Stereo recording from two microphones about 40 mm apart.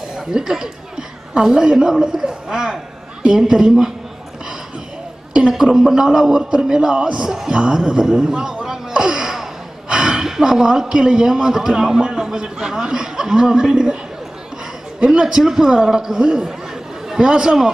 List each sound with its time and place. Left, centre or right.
0.1 s a woman's voice: centre
5.5 s a man's voice: centre
7.2 s a man's voice: centre
7.5 s a man's voice: right
8.9 s gasp: centre
9.8 s snort: right
10.5 s a man's voice: centre
12.0 s a man's voice: right
15.0 s a man's voice: right